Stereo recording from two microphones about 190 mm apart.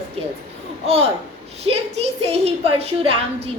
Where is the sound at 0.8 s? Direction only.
30° right (ahead or behind).